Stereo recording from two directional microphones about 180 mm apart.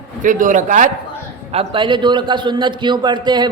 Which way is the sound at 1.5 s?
25° right (ahead or behind).